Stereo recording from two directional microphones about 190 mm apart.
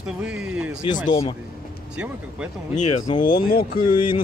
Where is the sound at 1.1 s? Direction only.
25° left (ahead or behind).